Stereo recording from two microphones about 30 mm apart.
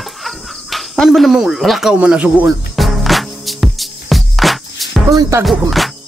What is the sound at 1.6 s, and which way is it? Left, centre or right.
Speech, centre.